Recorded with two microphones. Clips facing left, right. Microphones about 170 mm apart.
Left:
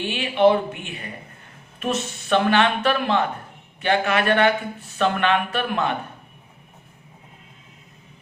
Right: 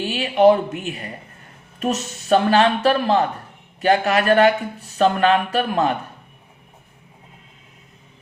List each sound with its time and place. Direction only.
0.1 s speech: 40° right (ahead or behind)